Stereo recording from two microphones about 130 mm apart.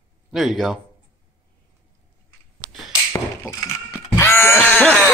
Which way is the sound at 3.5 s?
20° left (ahead or behind).